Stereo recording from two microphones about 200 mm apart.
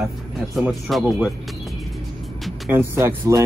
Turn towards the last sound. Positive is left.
turn(degrees=-15)  # may be behind; listen again after turning